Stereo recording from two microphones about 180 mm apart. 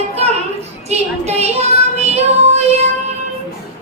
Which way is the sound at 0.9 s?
35° right (ahead or behind).